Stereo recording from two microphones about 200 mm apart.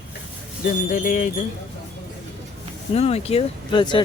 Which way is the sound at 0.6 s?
40° left (ahead or behind).